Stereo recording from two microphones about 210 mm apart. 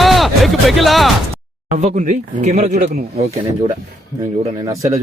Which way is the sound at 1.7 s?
35° right (ahead or behind).